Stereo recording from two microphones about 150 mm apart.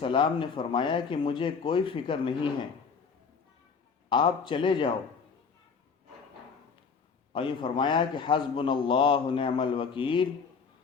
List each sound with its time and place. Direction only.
0.0 s a man's voice: 35° left (ahead or behind)
4.1 s a man's voice: 35° left (ahead or behind)
7.3 s a man's voice: 35° left (ahead or behind)